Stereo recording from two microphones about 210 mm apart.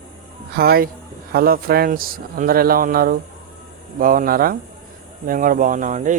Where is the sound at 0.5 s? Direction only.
45° right (ahead or behind).